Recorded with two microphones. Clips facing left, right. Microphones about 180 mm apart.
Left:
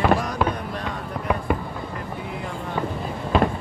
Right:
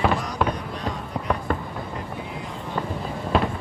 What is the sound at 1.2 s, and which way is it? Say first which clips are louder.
Fireworks: left 2 dB; 5° left (ahead or behind).